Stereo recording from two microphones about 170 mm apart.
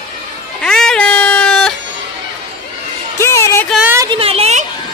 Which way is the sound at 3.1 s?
15° left (ahead or behind).